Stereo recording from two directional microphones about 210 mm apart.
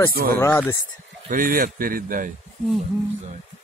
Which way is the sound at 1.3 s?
40° right (ahead or behind).